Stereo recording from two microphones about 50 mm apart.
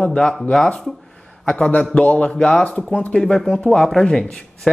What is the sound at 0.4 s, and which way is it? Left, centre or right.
Speech, centre.